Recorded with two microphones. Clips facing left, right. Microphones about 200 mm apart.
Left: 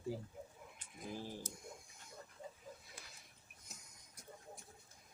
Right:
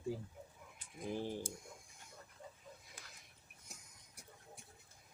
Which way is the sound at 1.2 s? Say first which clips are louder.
Right 6 dB; 20° right (ahead or behind).